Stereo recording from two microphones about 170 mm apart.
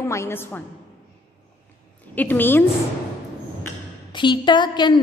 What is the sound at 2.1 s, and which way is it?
Speech, 10° left (ahead or behind).